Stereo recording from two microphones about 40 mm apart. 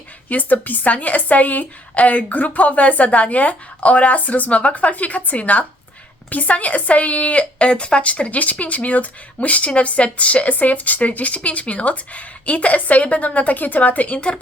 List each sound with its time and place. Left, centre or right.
0.3 s speech: left
7.7 s speech: left
14.2 s speech: left